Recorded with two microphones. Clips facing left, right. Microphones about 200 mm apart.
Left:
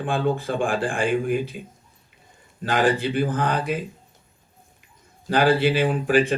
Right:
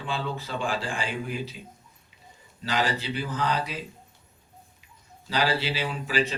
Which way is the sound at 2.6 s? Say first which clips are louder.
Left 7 dB; 50° left (ahead or behind).